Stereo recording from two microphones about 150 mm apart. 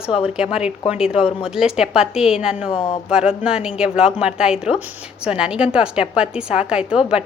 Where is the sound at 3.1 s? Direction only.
5° right (ahead or behind).